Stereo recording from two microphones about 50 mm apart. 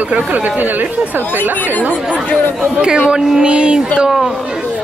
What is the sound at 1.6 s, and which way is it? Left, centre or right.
Speech, left.